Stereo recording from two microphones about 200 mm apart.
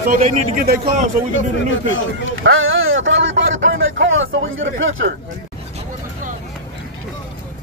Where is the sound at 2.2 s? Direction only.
85° right.